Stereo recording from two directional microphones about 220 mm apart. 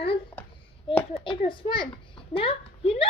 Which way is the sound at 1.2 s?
25° left (ahead or behind).